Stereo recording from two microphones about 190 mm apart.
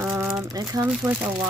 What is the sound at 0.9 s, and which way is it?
Speech, 5° right (ahead or behind).